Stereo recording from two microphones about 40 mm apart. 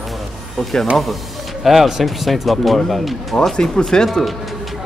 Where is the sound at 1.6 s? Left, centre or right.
Centre.